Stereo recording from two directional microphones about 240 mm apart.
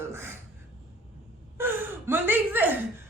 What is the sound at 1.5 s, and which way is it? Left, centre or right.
A man's voice, centre.